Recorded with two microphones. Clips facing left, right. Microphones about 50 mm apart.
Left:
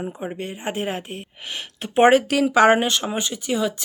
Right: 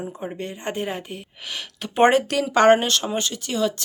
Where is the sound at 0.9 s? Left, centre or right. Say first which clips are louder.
Left 2 dB; left.